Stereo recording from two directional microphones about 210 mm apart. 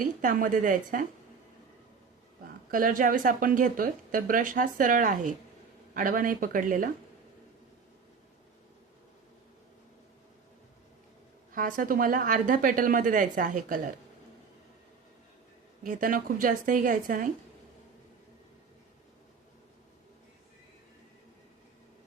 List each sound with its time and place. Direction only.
0.0 s speech: 40° right (ahead or behind)
2.7 s speech: 40° right (ahead or behind)
11.5 s speech: 40° right (ahead or behind)
15.8 s speech: 40° right (ahead or behind)